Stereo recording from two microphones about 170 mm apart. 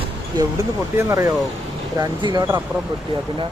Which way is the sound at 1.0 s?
15° right (ahead or behind).